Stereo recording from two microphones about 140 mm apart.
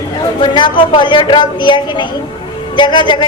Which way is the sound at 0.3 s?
35° left (ahead or behind).